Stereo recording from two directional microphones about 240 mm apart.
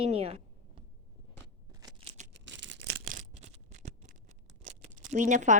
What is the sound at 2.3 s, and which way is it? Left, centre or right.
Toothbrush, right.